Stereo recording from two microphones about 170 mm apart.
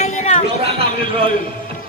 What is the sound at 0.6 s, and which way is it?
Speech, 35° right (ahead or behind).